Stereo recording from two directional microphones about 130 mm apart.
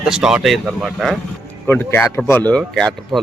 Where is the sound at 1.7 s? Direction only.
15° left (ahead or behind).